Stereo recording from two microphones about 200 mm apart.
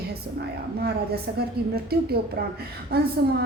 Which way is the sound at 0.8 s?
50° right (ahead or behind).